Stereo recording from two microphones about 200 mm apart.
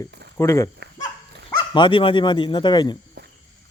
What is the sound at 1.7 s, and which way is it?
Speech, 25° left (ahead or behind).